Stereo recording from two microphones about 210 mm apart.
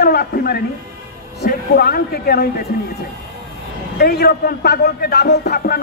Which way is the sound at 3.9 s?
50° left (ahead or behind).